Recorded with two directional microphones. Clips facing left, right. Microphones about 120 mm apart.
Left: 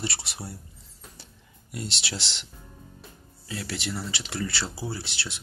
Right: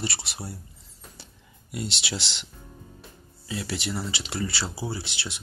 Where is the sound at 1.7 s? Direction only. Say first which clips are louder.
Right 3 dB; 15° right (ahead or behind).